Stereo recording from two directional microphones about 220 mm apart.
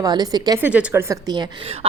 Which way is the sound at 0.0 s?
15° right (ahead or behind).